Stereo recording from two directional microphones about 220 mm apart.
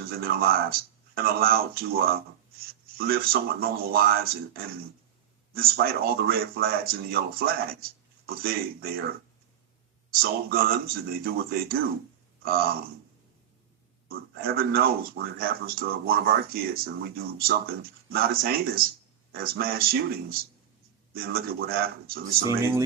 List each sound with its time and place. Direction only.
0.0 s speech: 45° right (ahead or behind)
14.1 s speech: 45° right (ahead or behind)
22.4 s speech: 10° right (ahead or behind)